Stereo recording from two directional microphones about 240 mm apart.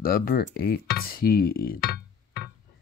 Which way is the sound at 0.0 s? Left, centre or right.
Left.